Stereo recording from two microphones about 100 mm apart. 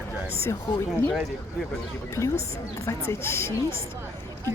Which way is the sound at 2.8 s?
25° left (ahead or behind).